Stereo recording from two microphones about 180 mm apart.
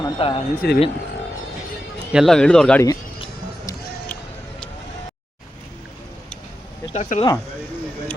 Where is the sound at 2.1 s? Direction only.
Centre (ahead or behind).